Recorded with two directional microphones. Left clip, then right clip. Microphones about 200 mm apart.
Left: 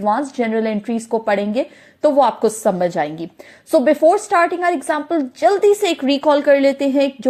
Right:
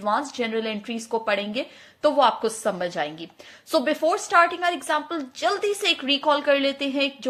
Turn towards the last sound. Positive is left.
turn(degrees=25)  # may be behind; listen again after turning